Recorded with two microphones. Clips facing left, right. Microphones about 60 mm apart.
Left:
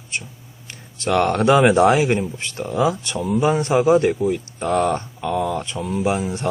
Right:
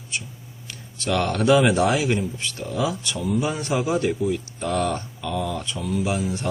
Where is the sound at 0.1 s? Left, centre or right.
Left.